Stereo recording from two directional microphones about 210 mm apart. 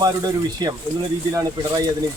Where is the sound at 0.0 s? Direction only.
20° right (ahead or behind).